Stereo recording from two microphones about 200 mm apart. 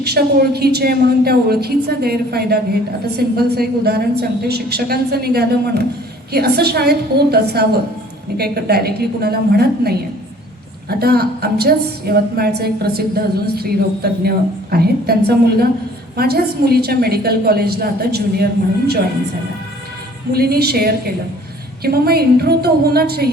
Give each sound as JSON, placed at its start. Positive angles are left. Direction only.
{"t": 0.0, "sound": "a woman's voice", "side_deg": -50}
{"t": 20.3, "sound": "a woman's voice", "side_deg": -50}